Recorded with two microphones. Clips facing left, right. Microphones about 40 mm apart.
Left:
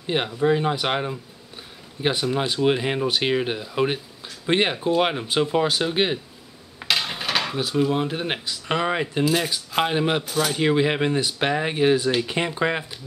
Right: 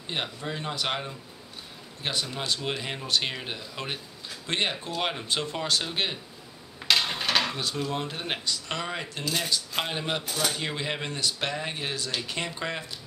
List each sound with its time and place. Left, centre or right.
0.0 s speech: centre
6.8 s speech: centre
10.2 s speech: centre
10.5 s speech: left